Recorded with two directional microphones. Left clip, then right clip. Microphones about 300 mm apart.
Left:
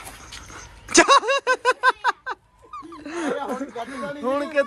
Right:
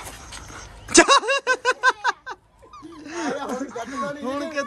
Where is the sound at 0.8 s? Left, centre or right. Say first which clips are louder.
Even; centre.